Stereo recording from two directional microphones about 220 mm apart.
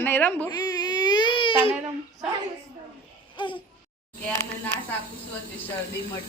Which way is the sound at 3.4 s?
20° left (ahead or behind).